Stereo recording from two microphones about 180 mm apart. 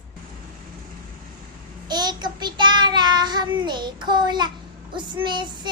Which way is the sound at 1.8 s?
25° right (ahead or behind).